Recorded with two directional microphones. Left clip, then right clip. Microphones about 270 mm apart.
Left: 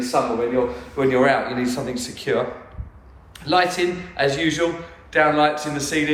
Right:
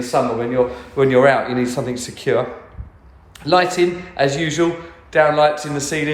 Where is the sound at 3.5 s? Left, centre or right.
Right.